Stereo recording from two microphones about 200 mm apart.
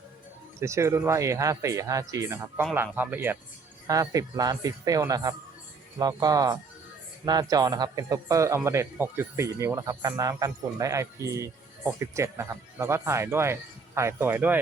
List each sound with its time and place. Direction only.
0.6 s a man's voice: 15° right (ahead or behind)